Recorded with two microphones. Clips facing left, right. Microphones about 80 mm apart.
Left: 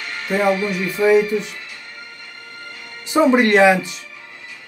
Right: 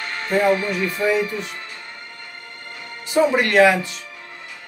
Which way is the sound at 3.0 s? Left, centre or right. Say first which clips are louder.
Left 3 dB; left.